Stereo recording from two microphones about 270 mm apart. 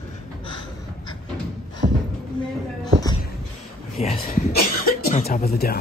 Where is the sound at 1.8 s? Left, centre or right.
Right.